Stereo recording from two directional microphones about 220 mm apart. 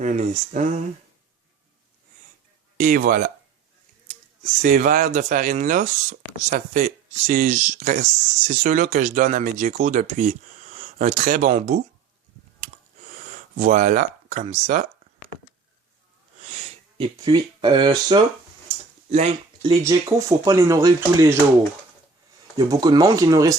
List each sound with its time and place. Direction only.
0.0 s speech: 35° right (ahead or behind)
2.7 s speech: 40° right (ahead or behind)
4.6 s speech: 35° right (ahead or behind)
12.5 s a sound: 35° right (ahead or behind)
16.5 s sniff: 30° right (ahead or behind)
17.2 s speech: 20° right (ahead or behind)
19.8 s speech: 15° right (ahead or behind)
22.5 s speech: 15° right (ahead or behind)